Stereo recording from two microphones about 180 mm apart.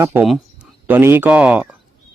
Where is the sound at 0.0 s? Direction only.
15° right (ahead or behind).